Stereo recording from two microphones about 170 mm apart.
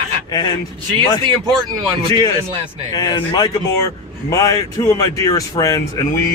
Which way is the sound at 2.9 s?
25° left (ahead or behind).